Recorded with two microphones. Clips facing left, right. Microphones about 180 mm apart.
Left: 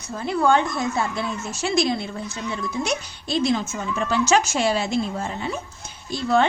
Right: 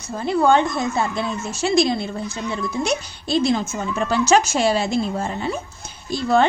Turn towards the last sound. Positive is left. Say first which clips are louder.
# right 2 dB
turn(degrees=-35)  # may be behind; listen again after turning